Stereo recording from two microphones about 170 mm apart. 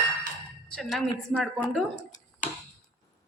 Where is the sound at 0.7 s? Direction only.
Centre (ahead or behind).